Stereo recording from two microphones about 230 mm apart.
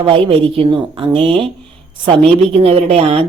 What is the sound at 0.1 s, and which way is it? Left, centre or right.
Speech, right.